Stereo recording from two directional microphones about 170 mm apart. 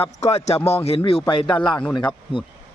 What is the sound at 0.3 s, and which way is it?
Speech, 40° left (ahead or behind).